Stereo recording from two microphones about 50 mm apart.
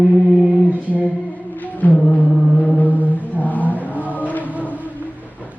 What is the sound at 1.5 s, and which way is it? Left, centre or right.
Music, left.